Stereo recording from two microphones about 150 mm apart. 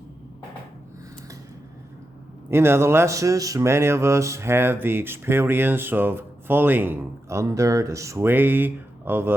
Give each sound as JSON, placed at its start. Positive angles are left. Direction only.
{"t": 2.5, "sound": "speech", "side_deg": -15}